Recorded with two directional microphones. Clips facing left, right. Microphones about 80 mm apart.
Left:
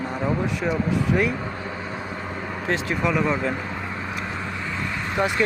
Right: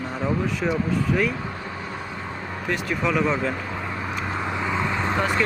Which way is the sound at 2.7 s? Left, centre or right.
Left.